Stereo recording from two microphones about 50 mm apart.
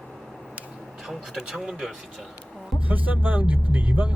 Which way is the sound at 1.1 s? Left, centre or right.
Centre.